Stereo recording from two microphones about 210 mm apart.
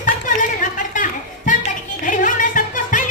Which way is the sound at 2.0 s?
40° left (ahead or behind).